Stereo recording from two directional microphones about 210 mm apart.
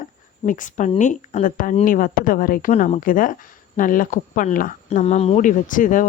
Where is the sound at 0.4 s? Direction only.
40° left (ahead or behind).